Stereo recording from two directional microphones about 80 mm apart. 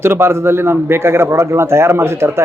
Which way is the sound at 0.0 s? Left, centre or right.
Right.